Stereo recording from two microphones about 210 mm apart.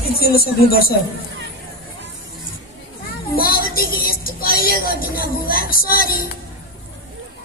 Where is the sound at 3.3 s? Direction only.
45° left (ahead or behind).